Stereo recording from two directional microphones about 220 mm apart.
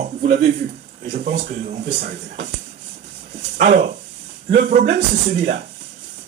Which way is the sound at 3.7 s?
30° right (ahead or behind).